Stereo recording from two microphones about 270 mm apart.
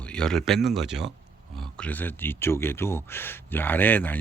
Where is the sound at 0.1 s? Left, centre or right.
Centre.